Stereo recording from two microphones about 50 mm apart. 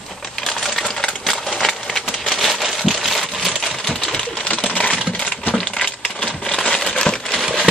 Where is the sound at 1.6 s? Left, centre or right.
Centre.